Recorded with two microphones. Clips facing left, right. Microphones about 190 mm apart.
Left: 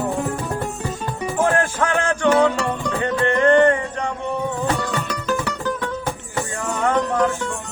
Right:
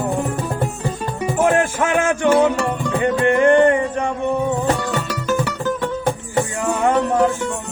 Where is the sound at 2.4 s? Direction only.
Centre (ahead or behind).